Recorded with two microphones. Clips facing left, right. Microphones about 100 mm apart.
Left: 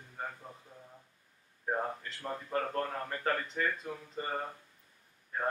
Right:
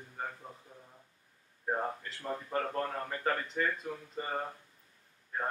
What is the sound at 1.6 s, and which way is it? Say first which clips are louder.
A man's voice: even; 5° right (ahead or behind).